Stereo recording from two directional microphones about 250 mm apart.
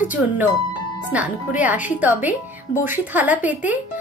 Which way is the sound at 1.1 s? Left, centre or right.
Centre.